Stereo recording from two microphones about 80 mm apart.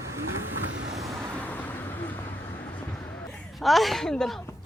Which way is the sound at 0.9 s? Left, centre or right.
Right.